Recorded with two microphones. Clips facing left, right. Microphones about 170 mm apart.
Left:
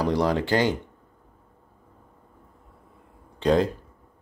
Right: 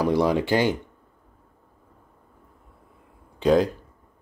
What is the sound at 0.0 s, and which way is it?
Speech, 10° right (ahead or behind).